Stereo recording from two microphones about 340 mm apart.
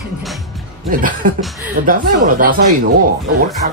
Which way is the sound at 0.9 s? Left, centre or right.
Right.